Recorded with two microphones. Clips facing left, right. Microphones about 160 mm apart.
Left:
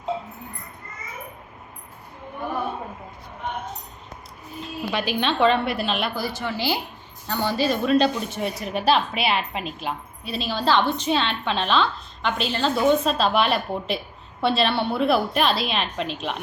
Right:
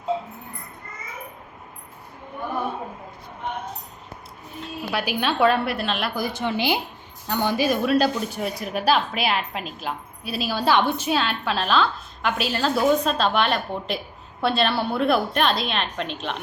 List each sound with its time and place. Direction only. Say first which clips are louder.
4.6 s a woman's voice: left 1 dB; 5° right (ahead or behind)
6.1 s a woman's voice: right 2 dB; 20° right (ahead or behind); by 16.4 s centre (ahead or behind)